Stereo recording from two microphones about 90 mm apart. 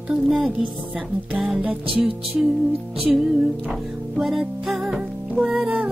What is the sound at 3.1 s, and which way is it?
Music, 15° right (ahead or behind).